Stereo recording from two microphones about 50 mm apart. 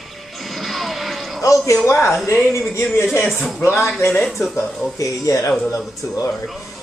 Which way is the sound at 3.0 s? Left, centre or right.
Centre.